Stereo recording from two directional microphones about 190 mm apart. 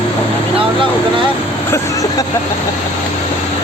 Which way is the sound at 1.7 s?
20° left (ahead or behind).